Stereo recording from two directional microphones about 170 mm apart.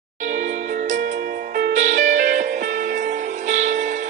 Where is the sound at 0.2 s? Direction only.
50° right (ahead or behind).